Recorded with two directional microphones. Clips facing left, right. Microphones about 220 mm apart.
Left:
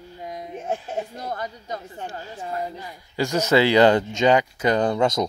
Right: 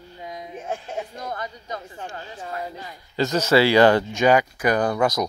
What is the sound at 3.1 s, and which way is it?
Speech, 15° left (ahead or behind).